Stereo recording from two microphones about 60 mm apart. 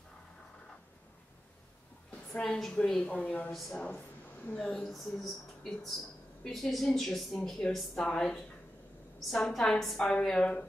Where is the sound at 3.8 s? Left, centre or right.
Left.